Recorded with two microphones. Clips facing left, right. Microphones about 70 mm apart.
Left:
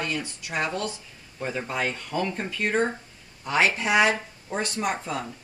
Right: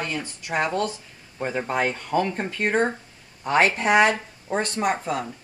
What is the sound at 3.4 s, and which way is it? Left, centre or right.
A woman's voice, right.